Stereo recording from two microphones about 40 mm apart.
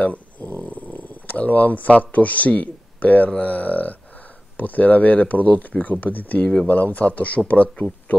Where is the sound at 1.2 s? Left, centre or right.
Left.